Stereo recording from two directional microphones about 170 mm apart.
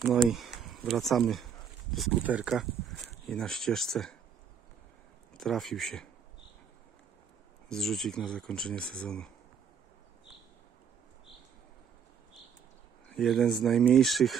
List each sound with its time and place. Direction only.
0.0 s speech: centre (ahead or behind)
5.3 s speech: centre (ahead or behind)
7.7 s speech: centre (ahead or behind)
13.1 s speech: centre (ahead or behind)